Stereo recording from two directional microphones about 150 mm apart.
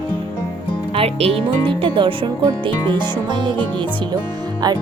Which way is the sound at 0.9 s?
40° right (ahead or behind).